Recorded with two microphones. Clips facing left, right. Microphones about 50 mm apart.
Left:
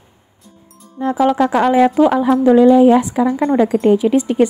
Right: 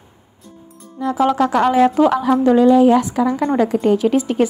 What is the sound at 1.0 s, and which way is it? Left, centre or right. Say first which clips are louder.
A woman's voice: left 2 dB; left.